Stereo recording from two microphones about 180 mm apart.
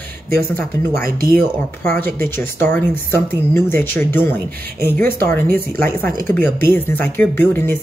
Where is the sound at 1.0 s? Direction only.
55° right (ahead or behind).